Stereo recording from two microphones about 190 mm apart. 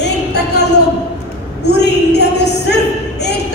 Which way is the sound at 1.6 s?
60° left (ahead or behind).